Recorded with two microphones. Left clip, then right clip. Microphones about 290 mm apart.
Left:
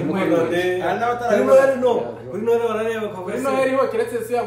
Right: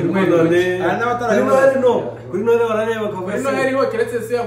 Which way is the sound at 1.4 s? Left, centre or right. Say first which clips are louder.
Right 1 dB; centre.